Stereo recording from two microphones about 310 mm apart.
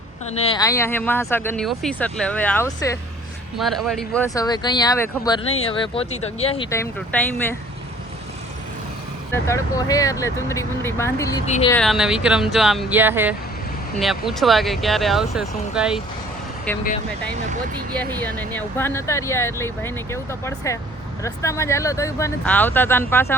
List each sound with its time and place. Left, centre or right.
0.3 s speech: centre
9.3 s speech: centre
11.4 s speech: left
11.7 s speech: centre
18.2 s speech: centre